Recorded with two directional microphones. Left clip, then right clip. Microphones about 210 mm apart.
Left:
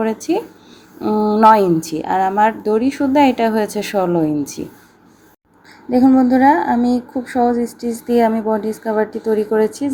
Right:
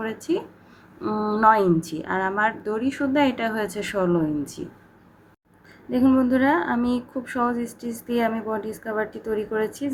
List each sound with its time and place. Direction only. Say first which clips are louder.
0.0 s speech: left 8 dB; 15° left (ahead or behind)
5.9 s speech: left 7 dB; 15° left (ahead or behind)